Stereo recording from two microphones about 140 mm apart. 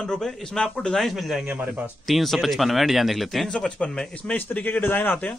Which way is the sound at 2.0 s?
Centre (ahead or behind).